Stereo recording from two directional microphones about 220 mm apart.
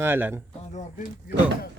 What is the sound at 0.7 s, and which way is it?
Speech, 35° left (ahead or behind).